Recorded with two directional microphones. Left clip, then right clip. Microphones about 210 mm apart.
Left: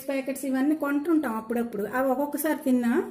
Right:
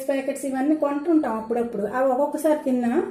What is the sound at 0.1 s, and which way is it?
A woman's voice, 50° left (ahead or behind).